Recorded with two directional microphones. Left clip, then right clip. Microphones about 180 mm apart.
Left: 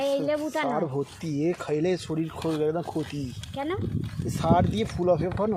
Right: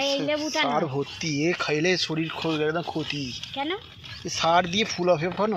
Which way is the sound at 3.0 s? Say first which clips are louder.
Right 6 dB; 20° left (ahead or behind).